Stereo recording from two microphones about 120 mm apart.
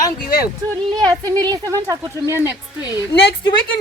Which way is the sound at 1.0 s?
30° right (ahead or behind).